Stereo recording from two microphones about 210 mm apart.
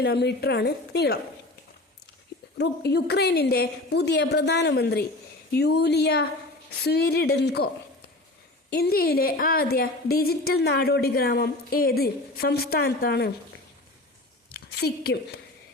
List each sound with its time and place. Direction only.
0.0 s a woman's voice: 50° left (ahead or behind)
2.6 s a woman's voice: 55° left (ahead or behind)
8.7 s a woman's voice: 50° left (ahead or behind)
14.5 s a woman's voice: 50° left (ahead or behind)